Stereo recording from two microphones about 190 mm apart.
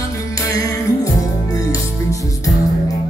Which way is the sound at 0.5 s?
20° left (ahead or behind).